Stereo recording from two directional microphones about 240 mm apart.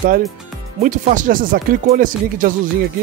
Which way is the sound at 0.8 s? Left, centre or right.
Right.